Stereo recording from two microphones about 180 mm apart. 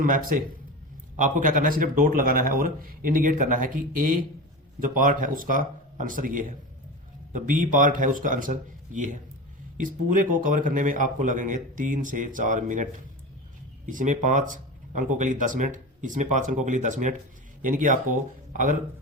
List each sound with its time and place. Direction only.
0.0 s speech: 50° right (ahead or behind)